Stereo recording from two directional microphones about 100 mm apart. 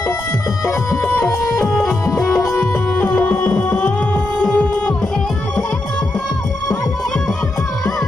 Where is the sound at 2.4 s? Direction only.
25° left (ahead or behind).